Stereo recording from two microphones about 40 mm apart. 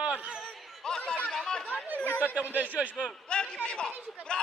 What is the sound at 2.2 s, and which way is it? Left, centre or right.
Speech, right.